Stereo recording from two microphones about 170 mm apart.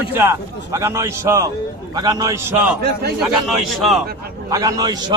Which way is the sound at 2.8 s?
65° right (ahead or behind).